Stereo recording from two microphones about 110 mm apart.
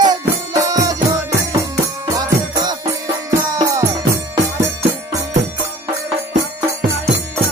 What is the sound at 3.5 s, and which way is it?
Music, 30° right (ahead or behind).